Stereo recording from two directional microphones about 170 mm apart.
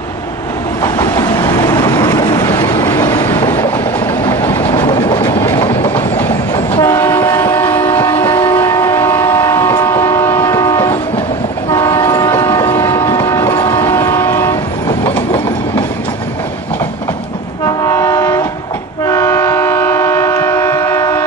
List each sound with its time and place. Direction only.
0.8 s vehicle: 15° left (ahead or behind)
4.3 s train: 15° left (ahead or behind)
4.7 s train: 25° left (ahead or behind)
6.7 s train: 15° left (ahead or behind)
17.6 s train: 20° left (ahead or behind)